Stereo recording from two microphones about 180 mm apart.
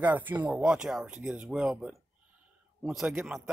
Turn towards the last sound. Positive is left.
turn(degrees=-5)  # may be behind; listen again after turning